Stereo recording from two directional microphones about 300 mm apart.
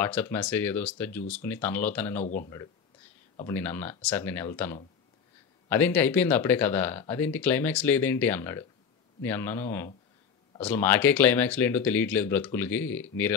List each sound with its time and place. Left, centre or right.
0.0 s speech: centre
2.2 s speech: left
3.3 s speech: centre